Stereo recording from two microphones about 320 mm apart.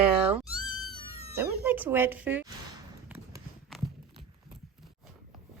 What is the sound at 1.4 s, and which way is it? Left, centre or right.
Speech, centre.